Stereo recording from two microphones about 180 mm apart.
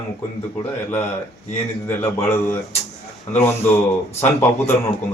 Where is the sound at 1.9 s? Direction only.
10° left (ahead or behind).